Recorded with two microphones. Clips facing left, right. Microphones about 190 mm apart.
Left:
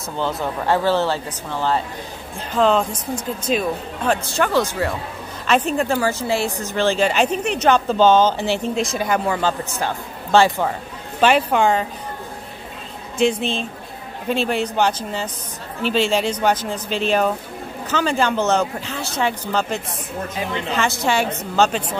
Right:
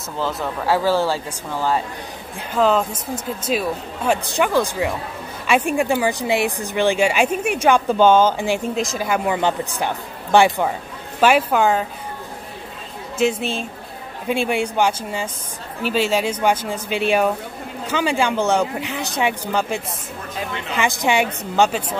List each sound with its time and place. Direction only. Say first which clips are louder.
0.2 s speech: left 1 dB; centre (ahead or behind)
9.2 s a woman's voice: right 1 dB; 20° right (ahead or behind)
13.2 s speech: left 1 dB; 5° right (ahead or behind)